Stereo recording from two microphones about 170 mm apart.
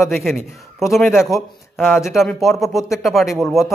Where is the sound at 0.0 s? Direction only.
Centre (ahead or behind).